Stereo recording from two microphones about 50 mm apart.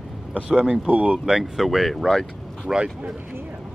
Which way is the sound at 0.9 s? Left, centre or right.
Right.